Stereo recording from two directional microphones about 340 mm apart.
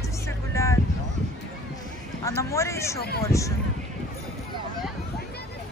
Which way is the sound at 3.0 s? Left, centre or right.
Left.